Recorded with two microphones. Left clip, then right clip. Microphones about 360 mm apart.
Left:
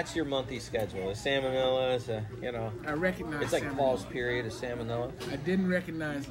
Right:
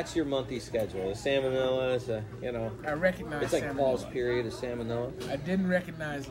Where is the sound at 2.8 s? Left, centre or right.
Centre.